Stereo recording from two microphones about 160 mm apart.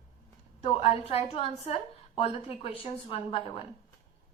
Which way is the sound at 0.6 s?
40° left (ahead or behind).